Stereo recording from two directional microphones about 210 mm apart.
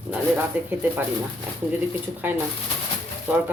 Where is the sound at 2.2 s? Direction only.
10° right (ahead or behind).